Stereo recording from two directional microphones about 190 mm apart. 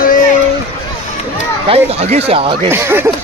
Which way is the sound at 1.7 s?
35° right (ahead or behind).